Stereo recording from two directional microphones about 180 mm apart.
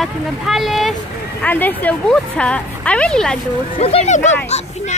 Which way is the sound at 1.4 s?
10° left (ahead or behind).